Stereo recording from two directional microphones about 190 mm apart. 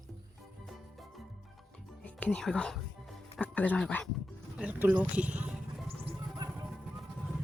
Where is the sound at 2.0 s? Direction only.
5° left (ahead or behind).